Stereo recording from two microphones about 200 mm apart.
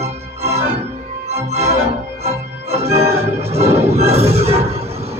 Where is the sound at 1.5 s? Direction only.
30° right (ahead or behind).